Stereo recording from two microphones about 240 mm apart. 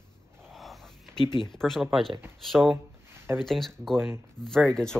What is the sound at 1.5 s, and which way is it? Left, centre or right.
Speech, centre.